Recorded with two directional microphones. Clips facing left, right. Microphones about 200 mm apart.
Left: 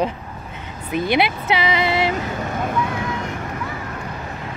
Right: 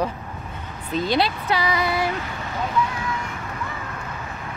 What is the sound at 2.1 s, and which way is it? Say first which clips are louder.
Vehicle: left 5 dB; 50° left (ahead or behind).